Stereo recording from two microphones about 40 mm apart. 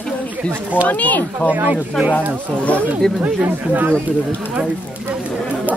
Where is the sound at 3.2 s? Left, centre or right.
Right.